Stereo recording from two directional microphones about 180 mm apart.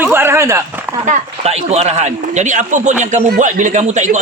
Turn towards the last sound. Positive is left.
turn(degrees=-40)  # may be behind; listen again after turning